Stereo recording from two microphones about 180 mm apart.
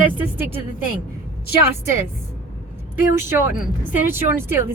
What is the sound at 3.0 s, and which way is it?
Speech, 10° right (ahead or behind).